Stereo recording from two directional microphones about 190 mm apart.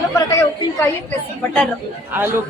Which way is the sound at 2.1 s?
10° right (ahead or behind).